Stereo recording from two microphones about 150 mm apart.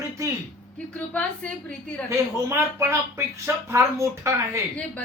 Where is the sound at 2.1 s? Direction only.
20° right (ahead or behind).